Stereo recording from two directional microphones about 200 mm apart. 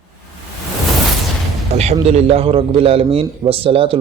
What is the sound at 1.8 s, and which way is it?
A man's voice, 30° right (ahead or behind).